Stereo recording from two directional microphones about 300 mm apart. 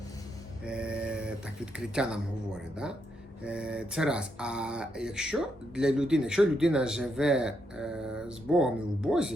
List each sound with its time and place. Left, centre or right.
0.6 s a sound: centre
1.8 s speech: centre
3.4 s speech: centre